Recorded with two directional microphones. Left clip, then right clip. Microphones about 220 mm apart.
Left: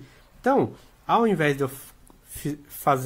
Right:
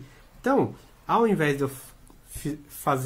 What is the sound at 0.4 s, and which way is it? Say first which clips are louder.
Speech: left 2 dB; 35° left (ahead or behind).